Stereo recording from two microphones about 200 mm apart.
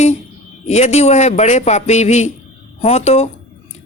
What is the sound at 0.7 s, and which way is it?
A woman's voice, 35° left (ahead or behind).